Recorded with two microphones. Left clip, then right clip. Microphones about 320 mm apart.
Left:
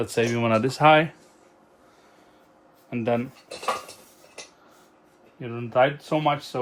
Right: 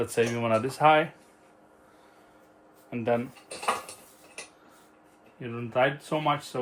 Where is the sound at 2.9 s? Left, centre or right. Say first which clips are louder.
Left 2 dB; left.